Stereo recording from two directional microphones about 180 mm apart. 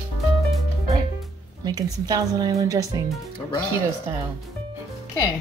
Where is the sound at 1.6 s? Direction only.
20° right (ahead or behind).